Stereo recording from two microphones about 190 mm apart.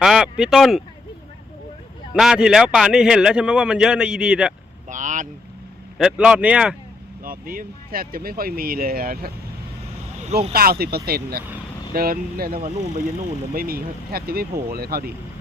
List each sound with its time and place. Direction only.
0.0 s speech: centre (ahead or behind)
2.1 s a man's voice: 5° right (ahead or behind)
4.9 s speech: 40° right (ahead or behind)
6.0 s a man's voice: 5° right (ahead or behind)
7.3 s speech: 50° right (ahead or behind)
10.5 s speech: 50° right (ahead or behind)